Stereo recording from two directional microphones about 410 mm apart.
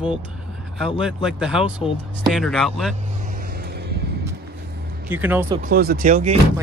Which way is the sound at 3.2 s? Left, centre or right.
Right.